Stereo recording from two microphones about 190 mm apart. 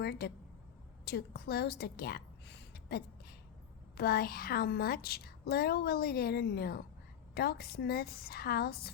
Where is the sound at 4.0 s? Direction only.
55° left (ahead or behind).